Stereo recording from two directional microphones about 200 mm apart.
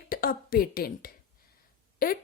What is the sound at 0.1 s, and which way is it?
A woman's voice, 45° left (ahead or behind).